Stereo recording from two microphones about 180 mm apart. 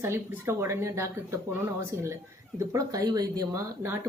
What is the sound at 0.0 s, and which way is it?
Speech, 15° right (ahead or behind).